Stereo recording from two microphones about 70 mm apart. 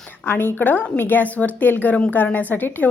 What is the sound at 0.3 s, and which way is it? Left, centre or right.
A woman's voice, left.